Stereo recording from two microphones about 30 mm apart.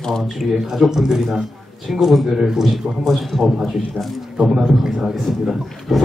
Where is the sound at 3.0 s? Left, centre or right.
Centre.